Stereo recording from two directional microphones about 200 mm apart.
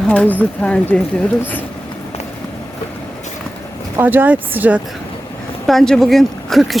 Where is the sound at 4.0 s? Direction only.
10° right (ahead or behind).